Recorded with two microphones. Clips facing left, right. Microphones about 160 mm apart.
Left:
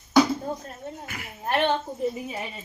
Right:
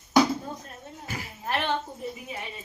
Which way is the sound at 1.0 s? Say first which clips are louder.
Right 2 dB; 30° right (ahead or behind).